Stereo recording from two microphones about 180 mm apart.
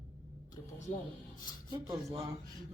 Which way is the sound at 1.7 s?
20° right (ahead or behind).